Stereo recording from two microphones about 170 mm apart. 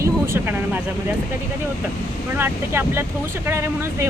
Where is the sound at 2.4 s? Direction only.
15° right (ahead or behind).